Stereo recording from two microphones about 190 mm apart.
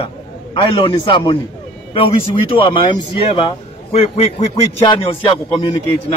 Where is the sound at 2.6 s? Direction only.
25° left (ahead or behind).